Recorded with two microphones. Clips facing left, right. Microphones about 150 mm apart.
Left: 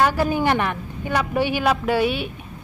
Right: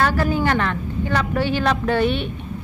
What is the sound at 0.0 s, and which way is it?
A woman's voice, 15° left (ahead or behind).